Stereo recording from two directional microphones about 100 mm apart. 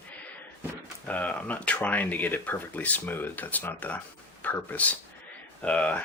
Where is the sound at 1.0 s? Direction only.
15° left (ahead or behind).